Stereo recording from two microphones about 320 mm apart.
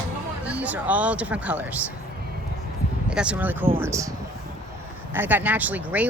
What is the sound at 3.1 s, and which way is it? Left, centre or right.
Speech, centre.